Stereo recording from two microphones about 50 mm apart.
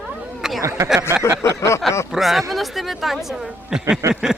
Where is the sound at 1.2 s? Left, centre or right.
Left.